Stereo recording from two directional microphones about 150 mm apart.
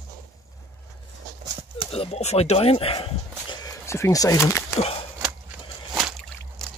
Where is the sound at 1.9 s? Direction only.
40° left (ahead or behind).